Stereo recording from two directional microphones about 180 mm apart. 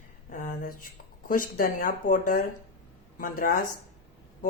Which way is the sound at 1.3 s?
50° left (ahead or behind).